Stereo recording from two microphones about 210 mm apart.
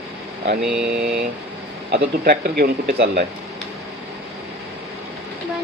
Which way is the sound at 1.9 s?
50° right (ahead or behind).